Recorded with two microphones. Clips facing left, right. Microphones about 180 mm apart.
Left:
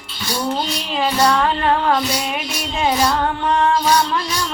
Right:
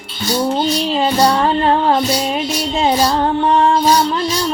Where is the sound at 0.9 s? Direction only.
30° right (ahead or behind).